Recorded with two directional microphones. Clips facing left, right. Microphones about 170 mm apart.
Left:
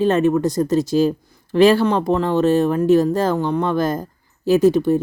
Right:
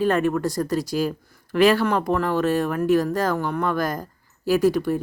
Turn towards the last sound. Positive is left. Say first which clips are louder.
# left 5 dB
turn(degrees=25)  # may be behind; listen again after turning